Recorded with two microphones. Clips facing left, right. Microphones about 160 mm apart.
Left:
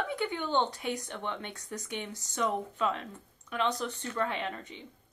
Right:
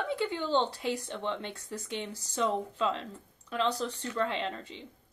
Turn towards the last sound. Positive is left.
turn(degrees=-25)  # may be behind; listen again after turning